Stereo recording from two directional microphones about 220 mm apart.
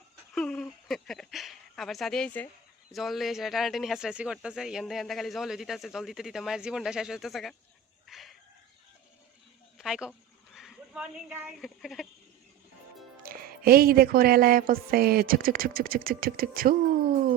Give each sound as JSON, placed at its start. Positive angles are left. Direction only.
{"t": 0.3, "sound": "a sound", "side_deg": 5}
{"t": 2.9, "sound": "speech", "side_deg": 0}
{"t": 8.0, "sound": "chicken", "side_deg": 0}
{"t": 9.7, "sound": "speech", "side_deg": 0}
{"t": 13.2, "sound": "music", "side_deg": -40}